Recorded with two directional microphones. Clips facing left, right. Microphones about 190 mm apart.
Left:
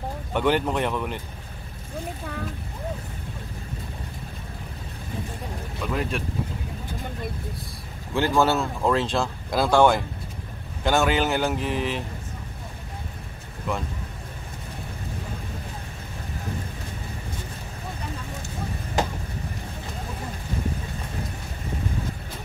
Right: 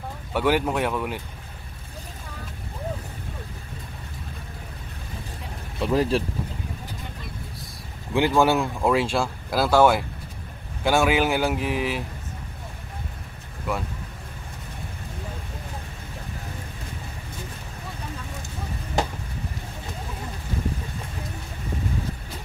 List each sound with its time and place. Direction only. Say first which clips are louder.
0.3 s speech: even; 5° right (ahead or behind)
5.9 s speech: right 6 dB; 30° right (ahead or behind)
8.1 s speech: right 2 dB; 15° right (ahead or behind)